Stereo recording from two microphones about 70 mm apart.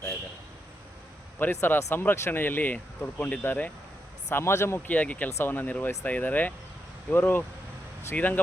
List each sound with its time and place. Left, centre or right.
1.4 s speech: left
4.9 s speech: left